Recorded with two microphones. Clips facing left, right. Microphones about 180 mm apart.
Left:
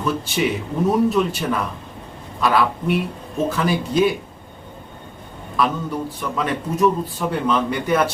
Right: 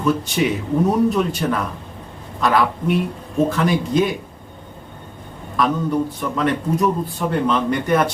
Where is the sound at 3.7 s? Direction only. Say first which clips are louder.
Even; 5° left (ahead or behind).